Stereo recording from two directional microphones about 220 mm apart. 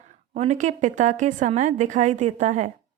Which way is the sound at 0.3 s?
30° right (ahead or behind).